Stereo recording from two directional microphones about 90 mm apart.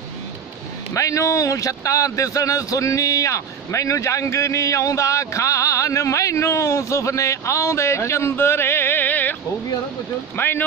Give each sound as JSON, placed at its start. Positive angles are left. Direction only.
{"t": 0.9, "sound": "speech", "side_deg": 35}
{"t": 10.3, "sound": "speech", "side_deg": 25}